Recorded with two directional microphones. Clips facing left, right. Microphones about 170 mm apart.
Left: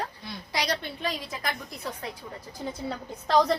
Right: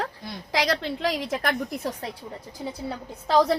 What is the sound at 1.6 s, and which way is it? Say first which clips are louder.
Speech: right 6 dB; 40° right (ahead or behind).